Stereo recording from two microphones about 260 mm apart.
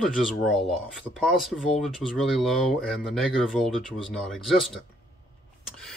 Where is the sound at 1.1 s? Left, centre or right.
Centre.